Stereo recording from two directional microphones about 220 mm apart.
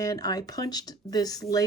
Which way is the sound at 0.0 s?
15° left (ahead or behind).